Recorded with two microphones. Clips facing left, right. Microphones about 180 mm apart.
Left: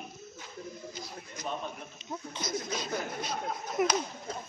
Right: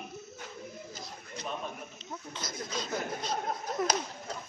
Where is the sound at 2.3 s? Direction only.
10° left (ahead or behind).